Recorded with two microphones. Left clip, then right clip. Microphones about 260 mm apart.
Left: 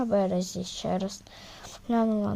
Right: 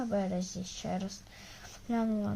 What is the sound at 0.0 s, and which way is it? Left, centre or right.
A woman's voice, left.